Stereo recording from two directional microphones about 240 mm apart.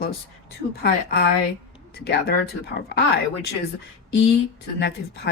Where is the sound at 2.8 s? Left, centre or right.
Left.